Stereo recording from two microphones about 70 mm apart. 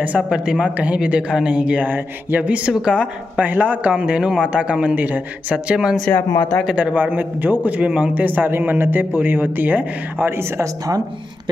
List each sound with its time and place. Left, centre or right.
0.3 s speech: centre
3.4 s a man's voice: right
5.9 s speech: centre
6.6 s a man's voice: centre; by 10.4 s right